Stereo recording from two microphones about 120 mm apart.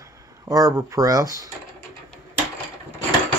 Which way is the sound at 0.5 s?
30° right (ahead or behind).